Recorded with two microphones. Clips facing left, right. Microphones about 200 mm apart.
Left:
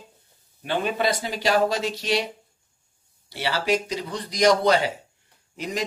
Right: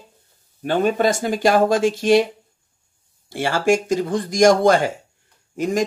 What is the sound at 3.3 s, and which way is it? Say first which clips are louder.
Speech: right 6 dB; 50° right (ahead or behind).